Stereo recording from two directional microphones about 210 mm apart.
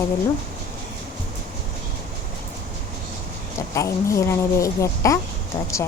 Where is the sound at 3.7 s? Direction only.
15° left (ahead or behind).